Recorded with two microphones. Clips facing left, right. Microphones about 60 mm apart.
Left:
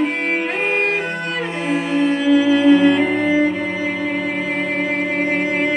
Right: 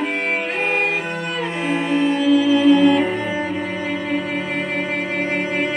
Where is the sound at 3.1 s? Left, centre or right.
Centre.